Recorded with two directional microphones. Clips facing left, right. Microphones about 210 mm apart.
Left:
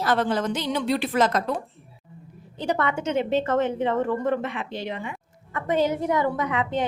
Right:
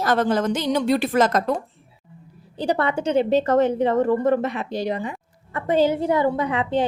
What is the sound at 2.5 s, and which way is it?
A woman's voice, 35° right (ahead or behind).